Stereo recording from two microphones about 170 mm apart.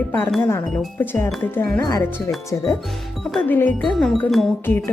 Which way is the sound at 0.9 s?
10° left (ahead or behind).